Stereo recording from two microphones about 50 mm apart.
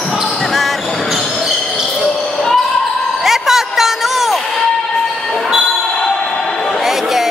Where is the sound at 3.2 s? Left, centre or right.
Centre.